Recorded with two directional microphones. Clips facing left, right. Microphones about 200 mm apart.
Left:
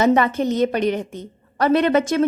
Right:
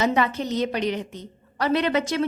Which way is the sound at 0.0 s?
50° left (ahead or behind).